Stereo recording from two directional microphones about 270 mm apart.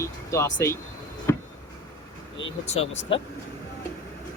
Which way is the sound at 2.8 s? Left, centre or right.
Left.